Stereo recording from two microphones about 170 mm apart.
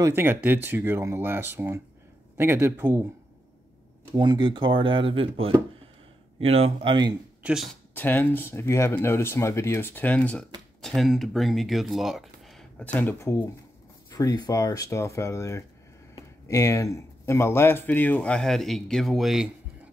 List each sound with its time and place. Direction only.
0.0 s speech: 15° right (ahead or behind)
4.1 s speech: 25° right (ahead or behind)
7.4 s speech: centre (ahead or behind)
7.9 s speech: 10° left (ahead or behind)